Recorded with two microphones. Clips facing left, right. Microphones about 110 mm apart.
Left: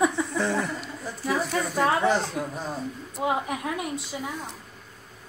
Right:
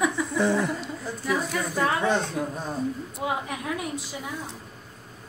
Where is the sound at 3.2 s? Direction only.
25° left (ahead or behind).